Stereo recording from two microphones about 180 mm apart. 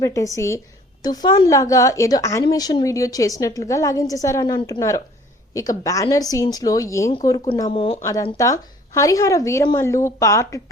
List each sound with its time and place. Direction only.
0.0 s a woman's voice: 15° left (ahead or behind)
7.7 s a woman's voice: 30° left (ahead or behind)
8.4 s a woman's voice: 20° left (ahead or behind)